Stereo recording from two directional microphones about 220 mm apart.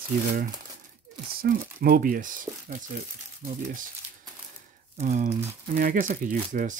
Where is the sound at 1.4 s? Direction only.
45° right (ahead or behind).